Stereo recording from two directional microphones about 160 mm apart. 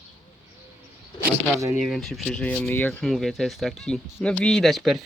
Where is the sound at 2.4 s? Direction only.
10° left (ahead or behind).